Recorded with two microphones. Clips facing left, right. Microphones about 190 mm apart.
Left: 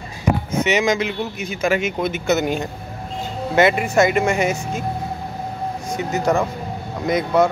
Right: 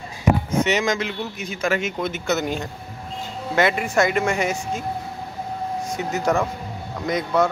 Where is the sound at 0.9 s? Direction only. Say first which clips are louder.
Left 4 dB; 10° left (ahead or behind).